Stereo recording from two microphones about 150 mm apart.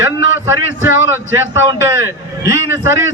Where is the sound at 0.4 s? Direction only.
15° right (ahead or behind).